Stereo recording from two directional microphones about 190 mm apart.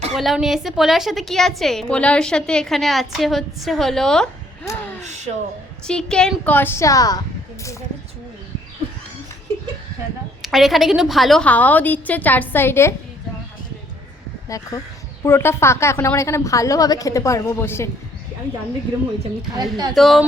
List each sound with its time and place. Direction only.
0.2 s a woman's voice: centre (ahead or behind)
4.6 s speech: 15° left (ahead or behind)
4.9 s speech: 35° right (ahead or behind)
5.8 s a woman's voice: 5° left (ahead or behind)
10.4 s a woman's voice: centre (ahead or behind)
14.5 s a woman's voice: 20° left (ahead or behind)
19.5 s speech: 20° right (ahead or behind)
20.0 s a woman's voice: centre (ahead or behind)